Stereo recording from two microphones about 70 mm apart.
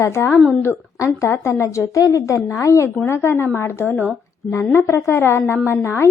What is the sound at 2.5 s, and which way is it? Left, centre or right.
Speech, left.